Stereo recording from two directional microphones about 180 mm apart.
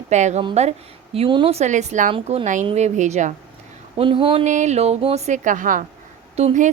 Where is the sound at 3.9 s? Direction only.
30° right (ahead or behind).